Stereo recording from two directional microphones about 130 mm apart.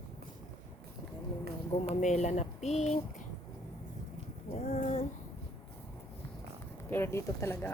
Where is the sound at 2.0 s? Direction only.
65° left (ahead or behind).